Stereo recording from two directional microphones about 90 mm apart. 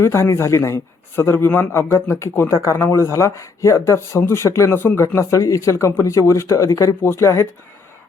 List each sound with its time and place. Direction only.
0.0 s a man's voice: 30° left (ahead or behind)
5.0 s speech: 35° left (ahead or behind)